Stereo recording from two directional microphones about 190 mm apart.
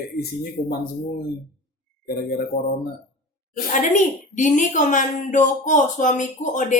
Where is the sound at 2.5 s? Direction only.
30° left (ahead or behind).